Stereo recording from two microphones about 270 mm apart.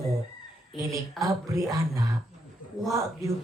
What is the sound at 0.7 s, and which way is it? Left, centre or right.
Speech, centre.